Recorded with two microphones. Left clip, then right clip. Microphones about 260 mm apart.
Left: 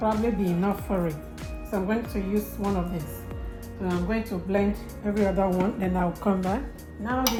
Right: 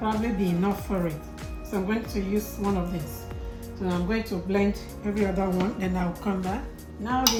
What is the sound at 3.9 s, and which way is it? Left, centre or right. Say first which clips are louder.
Speech: even; centre.